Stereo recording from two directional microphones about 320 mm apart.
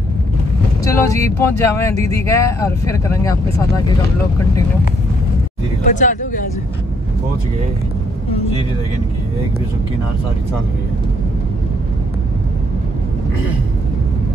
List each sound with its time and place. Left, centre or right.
0.8 s speech: centre
5.9 s speech: left
8.3 s speech: centre